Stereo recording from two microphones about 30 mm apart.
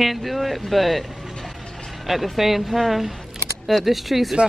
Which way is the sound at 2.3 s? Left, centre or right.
Centre.